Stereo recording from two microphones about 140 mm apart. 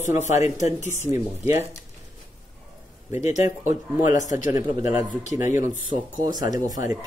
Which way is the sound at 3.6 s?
20° right (ahead or behind).